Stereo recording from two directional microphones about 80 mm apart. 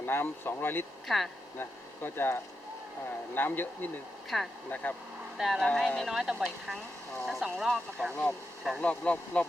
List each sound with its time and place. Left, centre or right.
0.0 s speech: left
1.0 s speech: centre
1.5 s speech: left
4.3 s speech: centre
4.7 s speech: left
5.4 s speech: centre
8.1 s speech: centre